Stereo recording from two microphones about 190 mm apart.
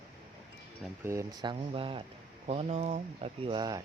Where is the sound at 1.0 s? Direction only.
15° right (ahead or behind).